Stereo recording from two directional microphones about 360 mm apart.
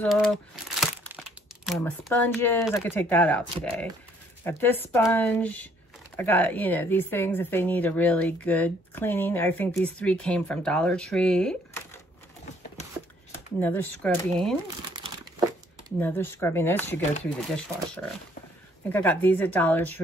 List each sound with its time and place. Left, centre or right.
0.0 s crumpling: centre
1.7 s speech: centre
13.6 s speech: centre
16.0 s speech: centre
18.9 s speech: centre